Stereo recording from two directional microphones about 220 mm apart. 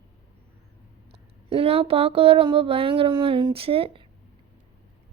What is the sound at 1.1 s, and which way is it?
A woman's voice, 25° right (ahead or behind).